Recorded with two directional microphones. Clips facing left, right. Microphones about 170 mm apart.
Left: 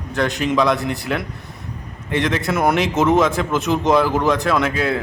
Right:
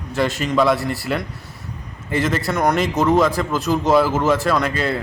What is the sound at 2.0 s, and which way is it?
A man's voice, 5° right (ahead or behind).